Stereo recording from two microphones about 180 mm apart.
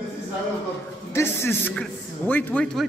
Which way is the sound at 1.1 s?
15° left (ahead or behind).